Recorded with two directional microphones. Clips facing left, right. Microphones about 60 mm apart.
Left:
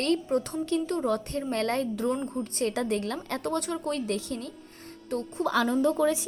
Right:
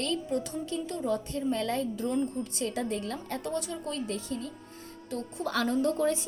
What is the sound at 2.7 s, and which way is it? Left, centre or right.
Speech, left.